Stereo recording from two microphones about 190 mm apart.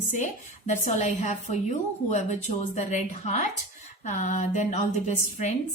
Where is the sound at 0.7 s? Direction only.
40° left (ahead or behind).